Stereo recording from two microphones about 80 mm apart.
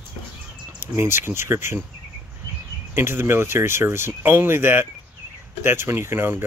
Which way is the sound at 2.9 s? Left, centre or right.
Right.